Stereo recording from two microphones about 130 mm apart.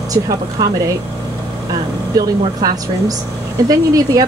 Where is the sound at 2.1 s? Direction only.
30° right (ahead or behind).